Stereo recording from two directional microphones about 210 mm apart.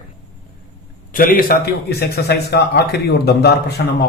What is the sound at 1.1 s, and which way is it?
A man's voice, 40° left (ahead or behind).